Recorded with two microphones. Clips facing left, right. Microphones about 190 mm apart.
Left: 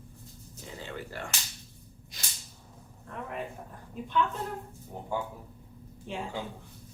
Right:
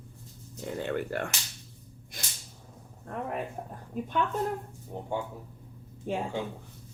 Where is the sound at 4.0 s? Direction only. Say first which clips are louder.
Right 5 dB; 45° right (ahead or behind).